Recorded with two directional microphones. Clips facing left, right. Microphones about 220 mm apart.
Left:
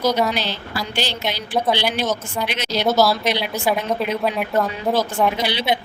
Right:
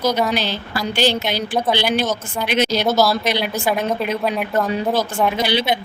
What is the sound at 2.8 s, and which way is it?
Speech, centre (ahead or behind).